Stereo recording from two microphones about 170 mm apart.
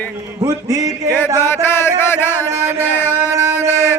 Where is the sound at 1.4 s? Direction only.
15° left (ahead or behind).